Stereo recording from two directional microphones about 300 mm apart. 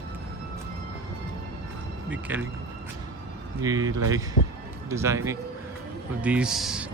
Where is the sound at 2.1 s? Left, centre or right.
Centre.